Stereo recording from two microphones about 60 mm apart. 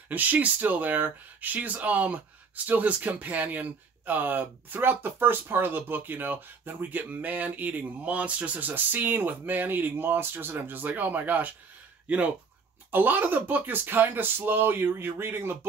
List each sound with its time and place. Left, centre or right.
0.1 s speech: right
12.9 s speech: right